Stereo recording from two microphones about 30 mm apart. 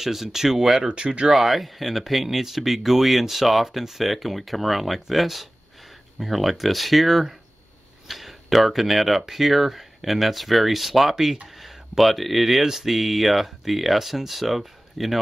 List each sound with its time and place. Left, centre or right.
0.0 s speech: centre
0.8 s speech: right
1.3 s speech: centre
11.4 s a sound: centre
12.0 s speech: centre